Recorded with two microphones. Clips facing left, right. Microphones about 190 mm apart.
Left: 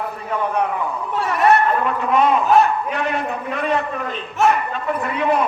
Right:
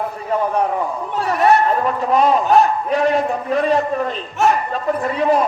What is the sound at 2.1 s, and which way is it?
A man's voice, 35° right (ahead or behind).